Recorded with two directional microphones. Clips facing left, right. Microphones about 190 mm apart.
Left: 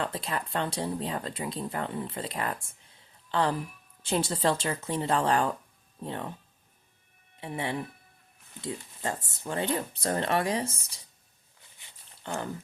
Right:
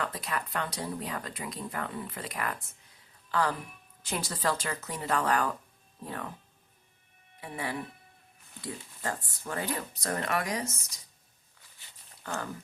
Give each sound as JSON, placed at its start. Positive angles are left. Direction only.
{"t": 0.0, "sound": "speech", "side_deg": 30}
{"t": 7.3, "sound": "speech", "side_deg": 25}
{"t": 12.2, "sound": "speech", "side_deg": 25}